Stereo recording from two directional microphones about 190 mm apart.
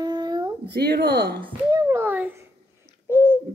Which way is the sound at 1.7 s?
15° right (ahead or behind).